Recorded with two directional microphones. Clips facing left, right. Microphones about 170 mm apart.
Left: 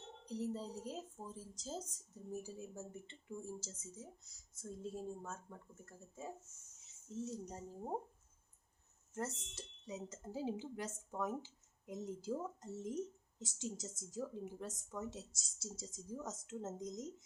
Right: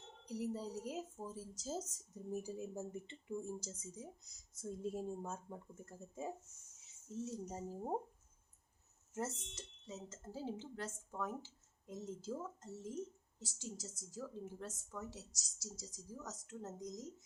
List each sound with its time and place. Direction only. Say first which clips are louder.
0.3 s a woman's voice: even; 10° right (ahead or behind)
7.3 s speech: right 1 dB; 5° right (ahead or behind)
9.1 s speech: right 1 dB; centre (ahead or behind)
9.8 s a woman's voice: left 3 dB; 15° left (ahead or behind)